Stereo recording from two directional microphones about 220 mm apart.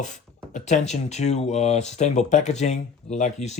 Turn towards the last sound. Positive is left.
turn(degrees=30)  # may be behind; listen again after turning